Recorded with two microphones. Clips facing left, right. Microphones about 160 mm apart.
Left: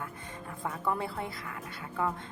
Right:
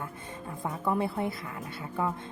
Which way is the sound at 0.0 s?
25° right (ahead or behind).